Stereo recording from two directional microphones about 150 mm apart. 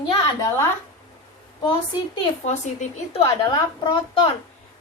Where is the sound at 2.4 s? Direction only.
45° left (ahead or behind).